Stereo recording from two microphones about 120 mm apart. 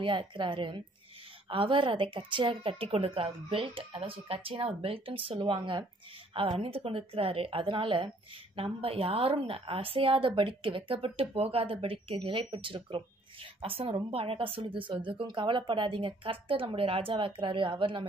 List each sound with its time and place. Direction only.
0.0 s a woman's voice: 45° right (ahead or behind)